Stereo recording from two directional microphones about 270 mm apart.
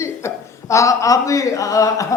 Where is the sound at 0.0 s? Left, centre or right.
Centre.